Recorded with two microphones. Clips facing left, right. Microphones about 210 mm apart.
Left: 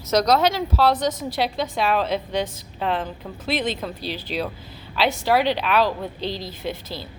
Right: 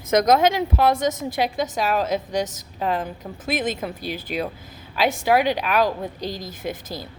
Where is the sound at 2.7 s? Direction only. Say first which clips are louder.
Right 1 dB; 10° right (ahead or behind).